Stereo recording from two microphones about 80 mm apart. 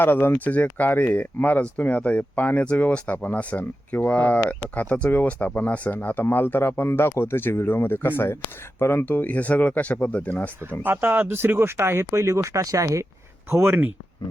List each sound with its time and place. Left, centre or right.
0.0 s speech: left
10.8 s speech: right
13.5 s speech: right